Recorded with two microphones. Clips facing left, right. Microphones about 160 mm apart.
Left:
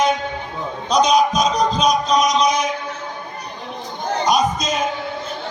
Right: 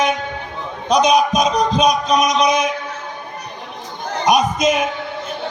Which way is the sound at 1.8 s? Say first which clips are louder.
Right 1 dB; 20° right (ahead or behind).